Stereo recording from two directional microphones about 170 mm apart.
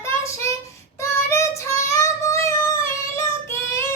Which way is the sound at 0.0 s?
15° left (ahead or behind).